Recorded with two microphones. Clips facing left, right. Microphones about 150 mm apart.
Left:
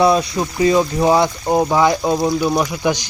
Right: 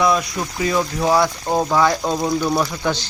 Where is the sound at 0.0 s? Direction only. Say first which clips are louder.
Left 4 dB; 30° left (ahead or behind).